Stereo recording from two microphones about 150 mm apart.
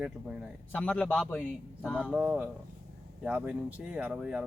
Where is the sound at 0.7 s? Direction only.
10° left (ahead or behind).